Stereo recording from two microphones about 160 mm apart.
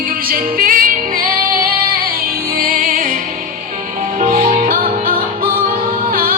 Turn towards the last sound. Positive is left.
turn(degrees=-65)  # may be behind; listen again after turning